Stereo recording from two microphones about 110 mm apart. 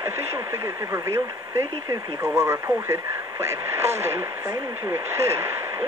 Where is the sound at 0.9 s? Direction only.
25° right (ahead or behind).